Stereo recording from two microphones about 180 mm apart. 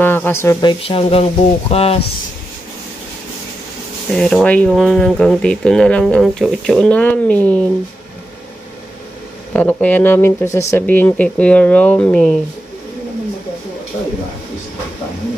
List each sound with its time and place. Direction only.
0.0 s speech: 10° left (ahead or behind); by 2.0 s 35° left (ahead or behind)
4.2 s speech: 5° left (ahead or behind)
9.5 s speech: 10° left (ahead or behind)